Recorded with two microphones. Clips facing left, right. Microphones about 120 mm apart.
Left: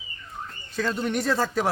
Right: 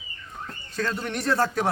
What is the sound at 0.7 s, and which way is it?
Speech, 5° left (ahead or behind).